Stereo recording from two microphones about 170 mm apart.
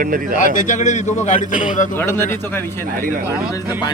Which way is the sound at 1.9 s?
15° left (ahead or behind).